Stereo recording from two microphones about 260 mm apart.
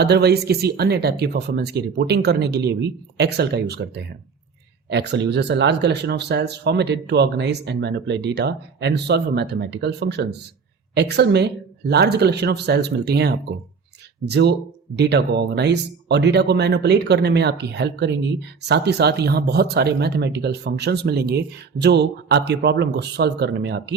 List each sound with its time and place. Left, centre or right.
0.0 s speech: right